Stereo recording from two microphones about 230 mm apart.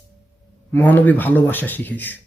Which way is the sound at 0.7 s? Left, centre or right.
Centre.